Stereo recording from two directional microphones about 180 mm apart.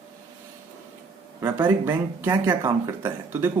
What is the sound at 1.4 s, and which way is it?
A man's voice, 10° right (ahead or behind).